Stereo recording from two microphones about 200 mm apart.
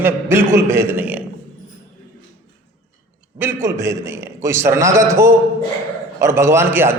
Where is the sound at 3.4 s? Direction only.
10° right (ahead or behind).